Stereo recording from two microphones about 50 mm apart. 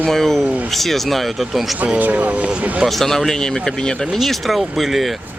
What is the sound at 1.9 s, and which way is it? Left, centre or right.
Speech, right.